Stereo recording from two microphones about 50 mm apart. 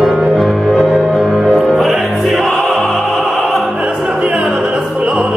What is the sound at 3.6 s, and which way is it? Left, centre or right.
Opera, centre.